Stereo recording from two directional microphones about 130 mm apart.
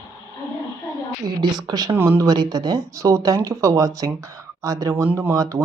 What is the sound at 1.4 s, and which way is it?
Speech, 30° right (ahead or behind).